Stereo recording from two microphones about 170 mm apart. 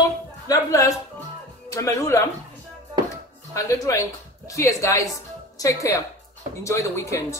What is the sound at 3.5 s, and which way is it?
A woman's voice, 20° left (ahead or behind).